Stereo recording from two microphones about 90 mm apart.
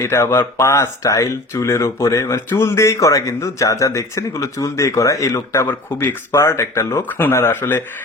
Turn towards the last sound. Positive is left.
turn(degrees=25)  # may be behind; listen again after turning